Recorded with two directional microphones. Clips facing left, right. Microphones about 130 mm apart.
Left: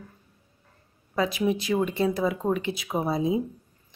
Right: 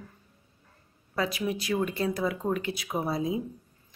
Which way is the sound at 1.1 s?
20° left (ahead or behind).